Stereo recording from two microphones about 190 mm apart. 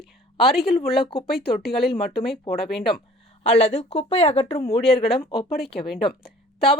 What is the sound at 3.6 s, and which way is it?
Speech, 35° left (ahead or behind).